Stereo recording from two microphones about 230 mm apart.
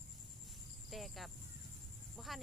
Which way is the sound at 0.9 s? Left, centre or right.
Centre.